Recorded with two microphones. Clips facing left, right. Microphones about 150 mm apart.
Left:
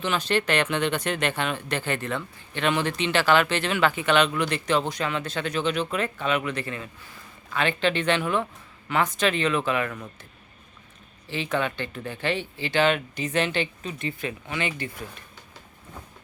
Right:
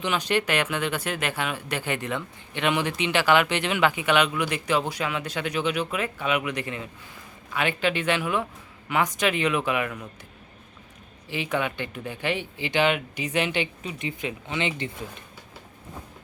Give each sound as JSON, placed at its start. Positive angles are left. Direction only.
{"t": 0.0, "sound": "speech", "side_deg": -15}
{"t": 11.3, "sound": "speech", "side_deg": -15}